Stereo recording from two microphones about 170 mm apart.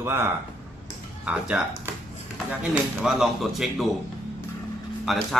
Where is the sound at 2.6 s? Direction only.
10° right (ahead or behind).